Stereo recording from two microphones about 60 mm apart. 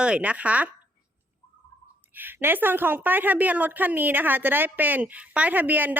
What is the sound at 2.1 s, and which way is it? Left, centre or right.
A woman's voice, right.